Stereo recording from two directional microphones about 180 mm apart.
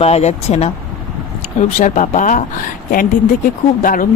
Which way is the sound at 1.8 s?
45° left (ahead or behind).